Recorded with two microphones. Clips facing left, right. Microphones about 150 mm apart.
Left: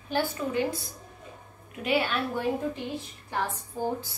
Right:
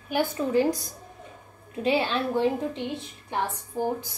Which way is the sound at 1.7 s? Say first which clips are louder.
Right 3 dB; 25° right (ahead or behind).